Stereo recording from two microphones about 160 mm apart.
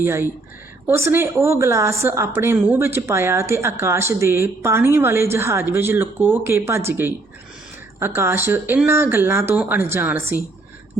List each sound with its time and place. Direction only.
0.0 s a woman's voice: 15° right (ahead or behind)